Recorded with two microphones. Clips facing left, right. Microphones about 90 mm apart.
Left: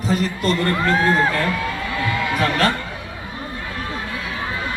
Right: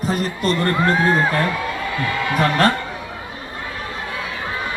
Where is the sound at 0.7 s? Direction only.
15° right (ahead or behind).